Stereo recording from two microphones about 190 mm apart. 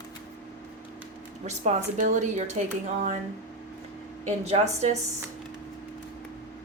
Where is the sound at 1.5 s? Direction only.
40° right (ahead or behind).